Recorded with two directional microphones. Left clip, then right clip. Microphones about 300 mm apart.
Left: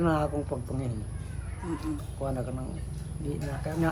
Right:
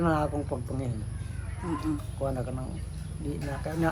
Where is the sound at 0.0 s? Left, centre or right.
Centre.